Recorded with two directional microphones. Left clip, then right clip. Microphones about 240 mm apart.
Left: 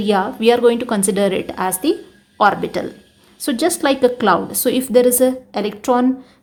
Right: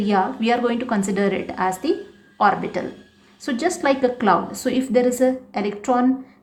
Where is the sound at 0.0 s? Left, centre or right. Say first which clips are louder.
Left 5 dB; left.